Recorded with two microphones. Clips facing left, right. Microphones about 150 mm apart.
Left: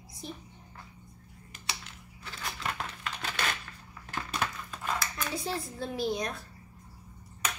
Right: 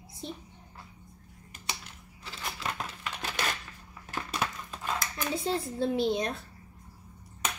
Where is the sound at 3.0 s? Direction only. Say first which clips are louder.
Right 1 dB; 10° right (ahead or behind).